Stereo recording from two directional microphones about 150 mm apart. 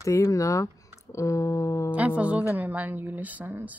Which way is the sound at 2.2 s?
10° right (ahead or behind).